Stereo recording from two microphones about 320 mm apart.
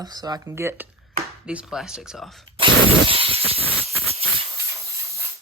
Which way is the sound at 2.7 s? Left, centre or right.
Right.